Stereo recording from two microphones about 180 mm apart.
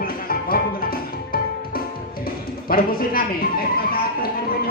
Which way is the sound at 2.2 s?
55° left (ahead or behind).